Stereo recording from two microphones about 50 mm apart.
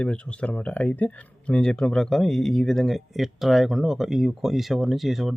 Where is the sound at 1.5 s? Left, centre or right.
Centre.